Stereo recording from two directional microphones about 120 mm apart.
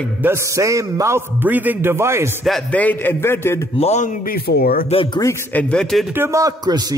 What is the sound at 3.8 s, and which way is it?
Speech, 70° left (ahead or behind).